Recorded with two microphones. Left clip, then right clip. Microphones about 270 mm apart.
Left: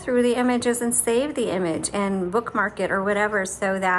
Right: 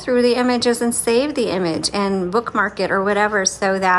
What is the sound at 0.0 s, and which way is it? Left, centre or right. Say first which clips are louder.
A woman's voice: right 5 dB; centre.